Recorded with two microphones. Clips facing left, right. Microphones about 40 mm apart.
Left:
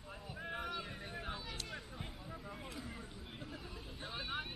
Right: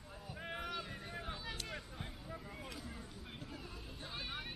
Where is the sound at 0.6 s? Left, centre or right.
Centre.